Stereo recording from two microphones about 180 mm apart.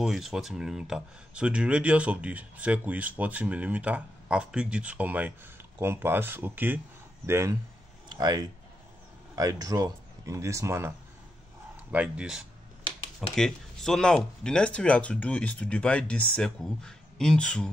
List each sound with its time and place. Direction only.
0.0 s speech: centre (ahead or behind)